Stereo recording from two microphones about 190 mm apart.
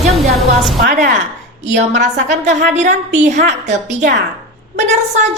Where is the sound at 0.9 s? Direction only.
40° right (ahead or behind).